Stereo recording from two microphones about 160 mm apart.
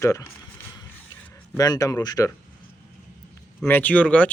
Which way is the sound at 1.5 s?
25° left (ahead or behind).